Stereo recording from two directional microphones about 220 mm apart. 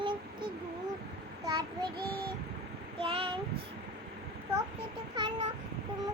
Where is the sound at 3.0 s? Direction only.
25° right (ahead or behind).